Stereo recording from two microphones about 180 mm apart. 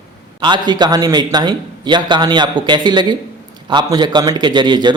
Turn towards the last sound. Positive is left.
turn(degrees=-25)  # may be behind; listen again after turning